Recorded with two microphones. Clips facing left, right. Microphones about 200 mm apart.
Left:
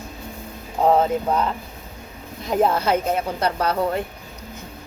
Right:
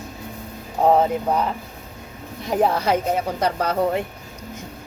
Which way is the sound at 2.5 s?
15° right (ahead or behind).